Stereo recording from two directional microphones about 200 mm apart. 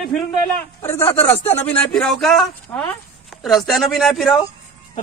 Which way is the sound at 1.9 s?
Centre (ahead or behind).